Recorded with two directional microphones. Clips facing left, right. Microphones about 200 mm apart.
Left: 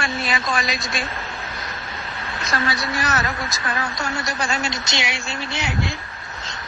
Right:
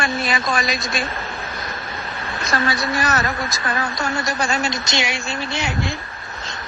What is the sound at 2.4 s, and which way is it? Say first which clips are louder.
A woman's voice: right 3 dB; 50° right (ahead or behind).